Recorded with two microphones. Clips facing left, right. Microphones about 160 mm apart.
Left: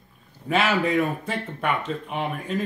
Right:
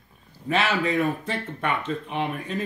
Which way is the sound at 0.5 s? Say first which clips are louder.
Left 2 dB; 10° left (ahead or behind).